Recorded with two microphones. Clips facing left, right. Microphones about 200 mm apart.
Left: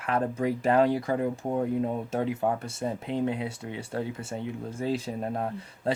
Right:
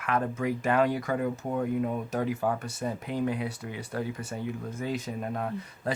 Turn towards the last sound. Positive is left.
turn(degrees=30)  # may be behind; listen again after turning